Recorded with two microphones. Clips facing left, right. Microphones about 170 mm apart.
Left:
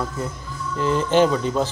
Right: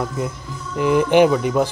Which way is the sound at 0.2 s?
15° right (ahead or behind).